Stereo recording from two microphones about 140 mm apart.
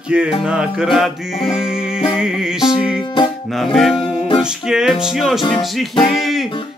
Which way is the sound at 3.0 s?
35° left (ahead or behind).